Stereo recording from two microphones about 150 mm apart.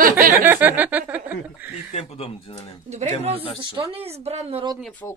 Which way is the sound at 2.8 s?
50° right (ahead or behind).